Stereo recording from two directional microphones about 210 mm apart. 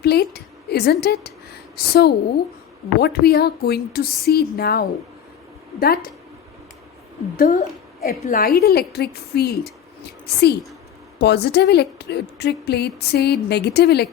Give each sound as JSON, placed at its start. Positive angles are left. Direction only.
{"t": 0.0, "sound": "a woman's voice", "side_deg": 50}
{"t": 7.3, "sound": "a woman's voice", "side_deg": 40}
{"t": 11.2, "sound": "a woman's voice", "side_deg": 50}